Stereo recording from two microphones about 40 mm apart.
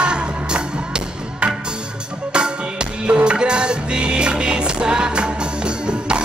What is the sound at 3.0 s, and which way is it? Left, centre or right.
Music, right.